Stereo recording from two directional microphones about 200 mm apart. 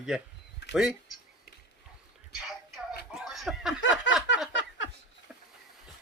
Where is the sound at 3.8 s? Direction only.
65° left (ahead or behind).